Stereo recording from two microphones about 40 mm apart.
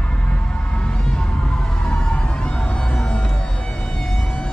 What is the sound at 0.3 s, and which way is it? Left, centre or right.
Music, left.